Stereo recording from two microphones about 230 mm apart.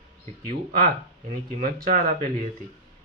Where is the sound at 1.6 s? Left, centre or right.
Right.